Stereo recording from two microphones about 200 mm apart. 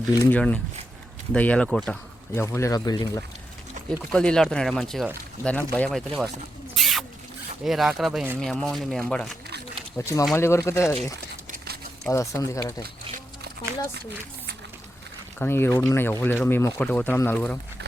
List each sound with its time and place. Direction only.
0.2 s speech: 5° left (ahead or behind)
3.8 s pour: 40° right (ahead or behind)
4.1 s speech: 5° left (ahead or behind)
6.7 s rodents: centre (ahead or behind)
7.6 s speech: centre (ahead or behind)
10.0 s speech: 15° left (ahead or behind)
15.4 s speech: 10° left (ahead or behind)